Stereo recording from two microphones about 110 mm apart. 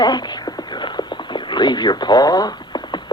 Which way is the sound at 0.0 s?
40° left (ahead or behind).